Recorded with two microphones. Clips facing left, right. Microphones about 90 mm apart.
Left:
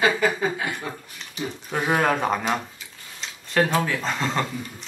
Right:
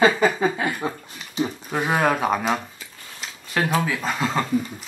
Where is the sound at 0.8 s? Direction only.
25° right (ahead or behind).